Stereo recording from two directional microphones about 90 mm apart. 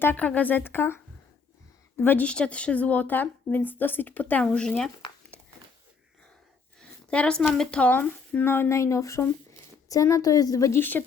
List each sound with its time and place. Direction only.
0.0 s speech: 20° left (ahead or behind)
2.2 s speech: 10° left (ahead or behind)
5.3 s a sound: 15° left (ahead or behind)
6.7 s a sound: 10° left (ahead or behind)
7.5 s a woman's voice: 10° left (ahead or behind); by 10.8 s 40° left (ahead or behind)
10.8 s speech: 20° left (ahead or behind)